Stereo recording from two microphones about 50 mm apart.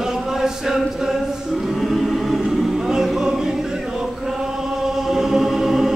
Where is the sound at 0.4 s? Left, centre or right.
Centre.